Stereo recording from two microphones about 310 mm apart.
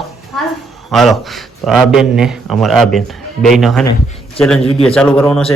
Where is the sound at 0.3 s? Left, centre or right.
Centre.